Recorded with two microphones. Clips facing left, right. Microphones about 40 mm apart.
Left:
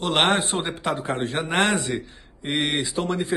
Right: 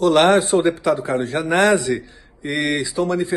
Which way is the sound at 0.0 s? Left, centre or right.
Left.